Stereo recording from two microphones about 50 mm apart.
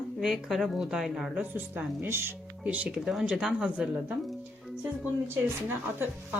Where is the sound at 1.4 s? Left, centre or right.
Right.